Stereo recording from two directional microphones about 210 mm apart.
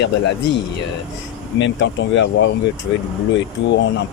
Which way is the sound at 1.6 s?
60° left (ahead or behind).